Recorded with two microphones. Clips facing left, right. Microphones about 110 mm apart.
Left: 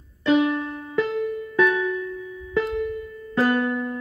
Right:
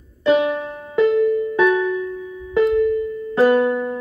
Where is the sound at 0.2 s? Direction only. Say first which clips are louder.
Right 3 dB; 20° right (ahead or behind).